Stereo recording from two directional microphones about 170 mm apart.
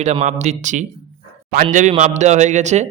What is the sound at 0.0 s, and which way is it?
Speech, 40° right (ahead or behind).